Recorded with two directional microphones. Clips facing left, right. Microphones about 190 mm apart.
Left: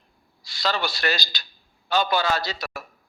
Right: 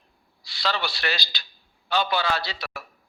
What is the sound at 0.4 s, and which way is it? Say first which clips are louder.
A man's voice: left 2 dB; 45° left (ahead or behind).